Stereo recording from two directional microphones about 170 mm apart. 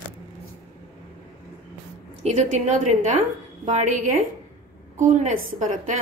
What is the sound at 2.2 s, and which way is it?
A woman's voice, 40° right (ahead or behind).